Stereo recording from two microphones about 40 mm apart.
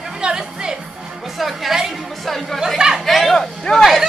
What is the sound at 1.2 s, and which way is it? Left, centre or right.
A woman's voice, centre.